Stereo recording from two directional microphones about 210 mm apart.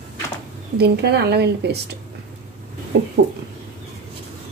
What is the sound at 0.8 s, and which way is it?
A woman's voice, 50° right (ahead or behind).